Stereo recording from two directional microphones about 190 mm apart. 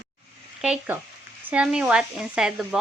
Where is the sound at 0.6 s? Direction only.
5° right (ahead or behind).